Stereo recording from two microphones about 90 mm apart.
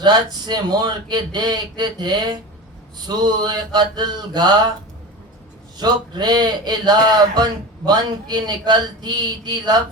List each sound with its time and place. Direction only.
0.0 s speech: 50° right (ahead or behind)
5.7 s speech: 50° right (ahead or behind)